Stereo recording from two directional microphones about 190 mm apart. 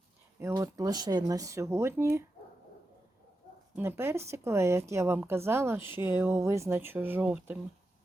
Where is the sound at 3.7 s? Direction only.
15° right (ahead or behind).